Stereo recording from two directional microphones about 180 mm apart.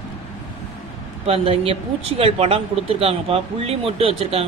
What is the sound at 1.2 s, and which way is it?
Speech, 35° right (ahead or behind).